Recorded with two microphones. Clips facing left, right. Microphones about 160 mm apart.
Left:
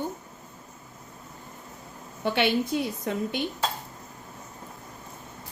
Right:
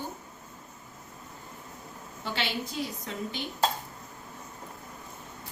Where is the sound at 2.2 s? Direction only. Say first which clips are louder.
Left 9 dB; 60° left (ahead or behind).